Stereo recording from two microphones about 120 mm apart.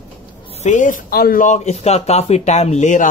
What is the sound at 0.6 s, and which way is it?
Speech, 90° left.